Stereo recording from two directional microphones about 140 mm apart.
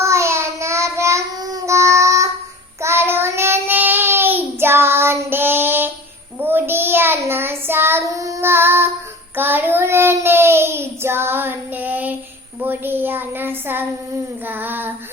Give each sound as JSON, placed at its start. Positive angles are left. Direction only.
{"t": 0.0, "sound": "child singing", "side_deg": -20}